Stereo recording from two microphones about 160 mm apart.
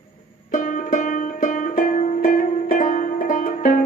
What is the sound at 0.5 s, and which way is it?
Music, 55° left (ahead or behind).